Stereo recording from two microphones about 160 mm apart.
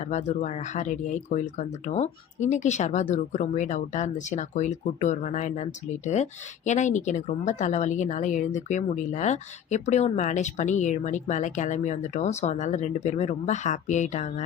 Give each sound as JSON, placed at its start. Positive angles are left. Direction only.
{"t": 0.0, "sound": "a woman's voice", "side_deg": 45}